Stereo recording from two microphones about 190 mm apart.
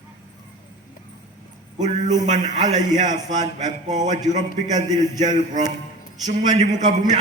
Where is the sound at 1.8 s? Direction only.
40° right (ahead or behind).